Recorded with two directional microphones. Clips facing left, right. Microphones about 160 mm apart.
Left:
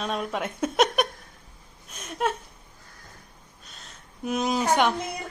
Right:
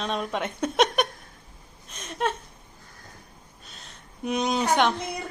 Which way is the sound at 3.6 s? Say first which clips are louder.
Even; centre (ahead or behind).